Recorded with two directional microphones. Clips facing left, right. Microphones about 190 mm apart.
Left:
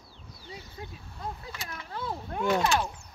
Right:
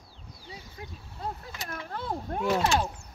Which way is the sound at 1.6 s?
50° right (ahead or behind).